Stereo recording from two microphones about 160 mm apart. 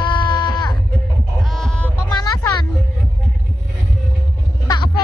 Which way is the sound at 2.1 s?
25° left (ahead or behind).